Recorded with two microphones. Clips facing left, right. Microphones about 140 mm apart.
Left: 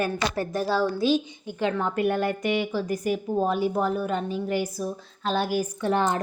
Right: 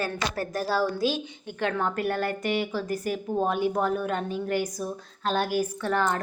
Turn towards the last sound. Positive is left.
turn(degrees=20)  # may be behind; listen again after turning